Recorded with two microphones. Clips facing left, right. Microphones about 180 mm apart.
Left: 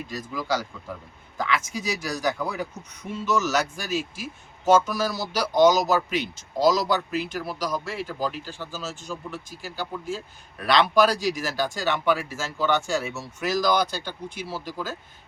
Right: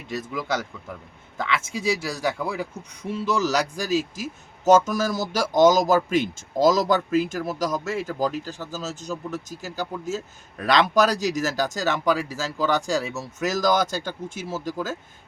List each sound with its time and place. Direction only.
0.1 s speech: 25° right (ahead or behind); by 14.9 s 45° right (ahead or behind)